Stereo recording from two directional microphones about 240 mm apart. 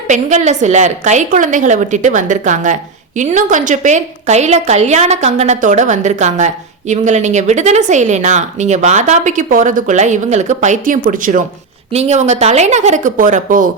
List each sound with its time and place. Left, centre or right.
0.1 s a woman's voice: right